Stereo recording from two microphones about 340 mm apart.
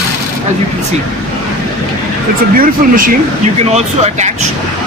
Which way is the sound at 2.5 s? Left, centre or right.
Right.